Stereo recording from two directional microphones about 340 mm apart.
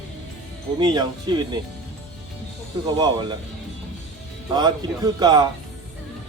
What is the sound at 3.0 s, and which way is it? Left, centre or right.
Speech, centre.